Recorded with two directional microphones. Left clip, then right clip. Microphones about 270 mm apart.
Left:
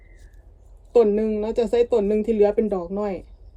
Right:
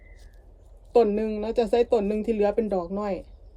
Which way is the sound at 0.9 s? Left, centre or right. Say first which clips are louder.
Left 3 dB; centre.